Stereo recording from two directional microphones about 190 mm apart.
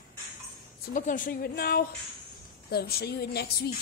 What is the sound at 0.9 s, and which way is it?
Speech, 45° left (ahead or behind).